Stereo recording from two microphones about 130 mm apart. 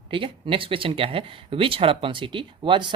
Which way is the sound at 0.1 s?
40° right (ahead or behind).